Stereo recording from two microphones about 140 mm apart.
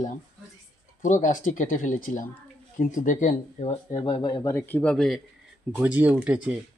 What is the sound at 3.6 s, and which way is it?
Speech, 45° left (ahead or behind).